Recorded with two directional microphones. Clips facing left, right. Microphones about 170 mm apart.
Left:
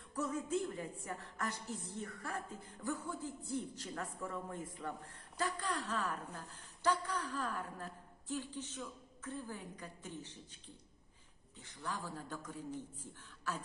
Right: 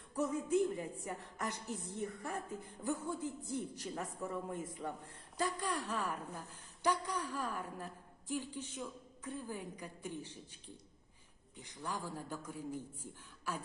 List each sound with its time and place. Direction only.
0.2 s a man's voice: 15° right (ahead or behind)
11.5 s a man's voice: 15° right (ahead or behind)